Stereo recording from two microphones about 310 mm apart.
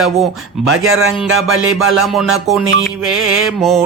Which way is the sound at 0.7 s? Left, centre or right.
Right.